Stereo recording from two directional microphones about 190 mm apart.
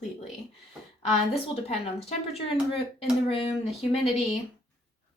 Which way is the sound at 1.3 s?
35° left (ahead or behind).